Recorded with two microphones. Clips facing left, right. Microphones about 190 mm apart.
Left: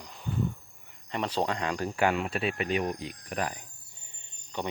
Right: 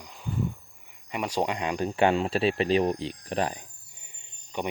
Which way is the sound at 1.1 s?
10° right (ahead or behind).